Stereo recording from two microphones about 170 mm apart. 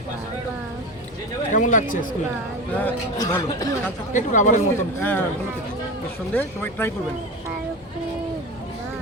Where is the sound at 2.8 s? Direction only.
15° left (ahead or behind).